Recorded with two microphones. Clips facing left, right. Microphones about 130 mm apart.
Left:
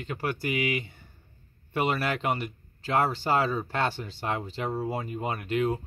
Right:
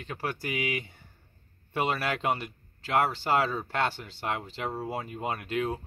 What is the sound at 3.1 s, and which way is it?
Speech, 5° left (ahead or behind).